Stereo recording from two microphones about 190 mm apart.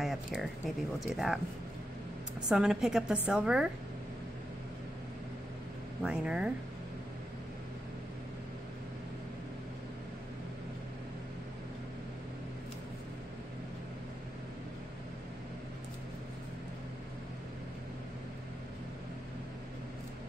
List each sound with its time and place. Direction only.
0.0 s speech: centre (ahead or behind)
2.5 s speech: 5° right (ahead or behind)
6.0 s speech: 5° right (ahead or behind)